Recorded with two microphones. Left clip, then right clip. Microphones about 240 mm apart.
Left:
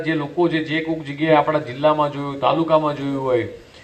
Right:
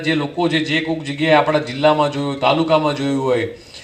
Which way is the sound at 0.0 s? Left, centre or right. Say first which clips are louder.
Right 1 dB; right.